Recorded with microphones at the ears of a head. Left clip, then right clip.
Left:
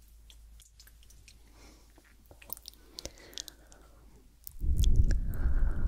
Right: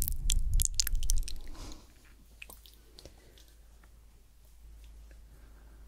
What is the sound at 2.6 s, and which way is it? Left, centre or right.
Chewing, left.